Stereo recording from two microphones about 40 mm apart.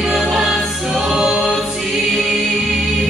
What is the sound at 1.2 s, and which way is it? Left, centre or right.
A capella, centre.